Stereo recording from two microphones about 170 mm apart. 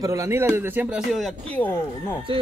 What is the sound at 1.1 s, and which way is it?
Speech, centre (ahead or behind).